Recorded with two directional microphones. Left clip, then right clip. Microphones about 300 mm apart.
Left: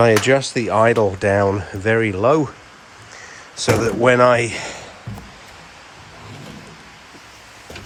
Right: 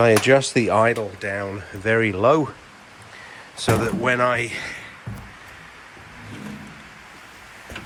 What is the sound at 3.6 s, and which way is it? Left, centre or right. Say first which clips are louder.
Speech: left 5 dB; centre.